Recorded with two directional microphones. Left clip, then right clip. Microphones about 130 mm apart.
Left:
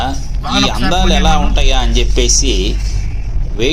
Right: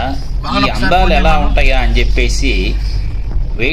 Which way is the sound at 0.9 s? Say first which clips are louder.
Right 5 dB; 40° left (ahead or behind).